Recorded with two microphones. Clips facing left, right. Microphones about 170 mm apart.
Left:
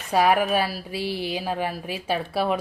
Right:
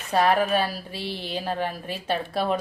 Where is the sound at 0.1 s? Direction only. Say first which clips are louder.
Left 1 dB; 10° left (ahead or behind).